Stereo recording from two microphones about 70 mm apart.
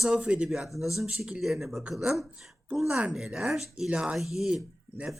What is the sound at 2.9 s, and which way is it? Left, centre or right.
Speech, centre.